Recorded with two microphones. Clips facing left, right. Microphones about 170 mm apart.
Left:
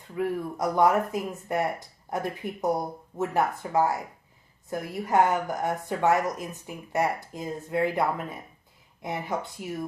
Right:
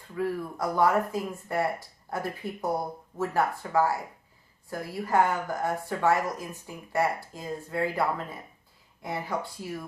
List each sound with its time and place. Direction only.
0.2 s speech: 20° left (ahead or behind)